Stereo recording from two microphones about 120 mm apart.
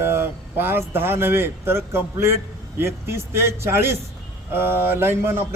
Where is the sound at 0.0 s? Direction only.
20° right (ahead or behind).